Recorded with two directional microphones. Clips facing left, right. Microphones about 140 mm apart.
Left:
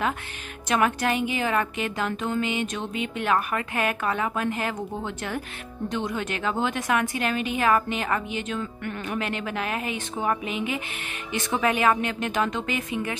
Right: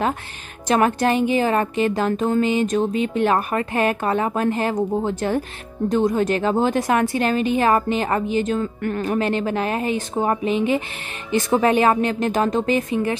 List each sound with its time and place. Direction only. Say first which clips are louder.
0.7 s a woman's voice: right 6 dB; 35° right (ahead or behind)